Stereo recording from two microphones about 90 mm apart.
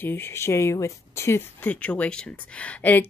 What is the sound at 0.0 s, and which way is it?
A woman's voice, 25° left (ahead or behind).